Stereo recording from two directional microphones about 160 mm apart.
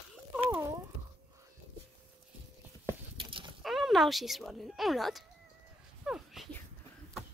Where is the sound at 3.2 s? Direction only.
30° right (ahead or behind).